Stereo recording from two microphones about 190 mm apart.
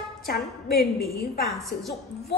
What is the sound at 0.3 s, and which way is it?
A woman's voice, 55° left (ahead or behind).